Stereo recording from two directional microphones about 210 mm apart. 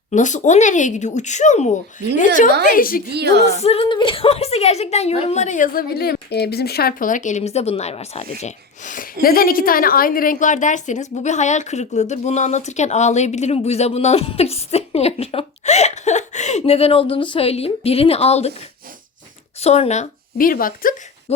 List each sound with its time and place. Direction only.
0.1 s a woman's voice: 35° left (ahead or behind)
3.1 s a woman's voice: 50° right (ahead or behind)
3.4 s a woman's voice: 30° left (ahead or behind)
19.6 s speech: 30° left (ahead or behind)